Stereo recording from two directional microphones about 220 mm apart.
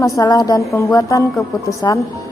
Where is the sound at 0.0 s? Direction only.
15° left (ahead or behind).